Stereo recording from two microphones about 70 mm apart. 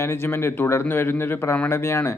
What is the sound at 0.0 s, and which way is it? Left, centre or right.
A man's voice, left.